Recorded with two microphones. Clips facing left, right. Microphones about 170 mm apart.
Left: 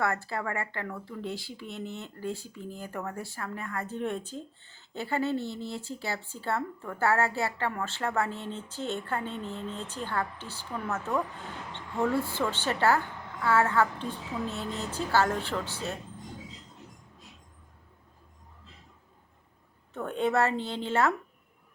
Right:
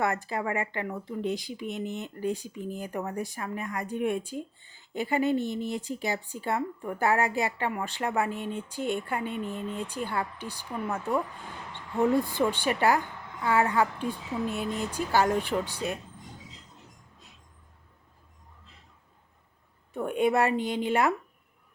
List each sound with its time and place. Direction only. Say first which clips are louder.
0.0 s speech: right 2 dB; 20° right (ahead or behind)
19.9 s speech: right 3 dB; 10° right (ahead or behind)